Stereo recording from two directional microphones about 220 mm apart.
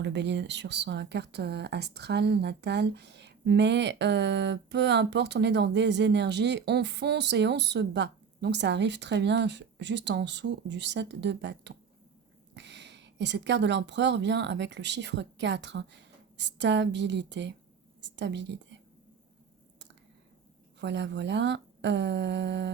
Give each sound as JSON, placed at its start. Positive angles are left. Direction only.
{"t": 0.0, "sound": "a woman's voice", "side_deg": -50}
{"t": 20.8, "sound": "speech", "side_deg": -55}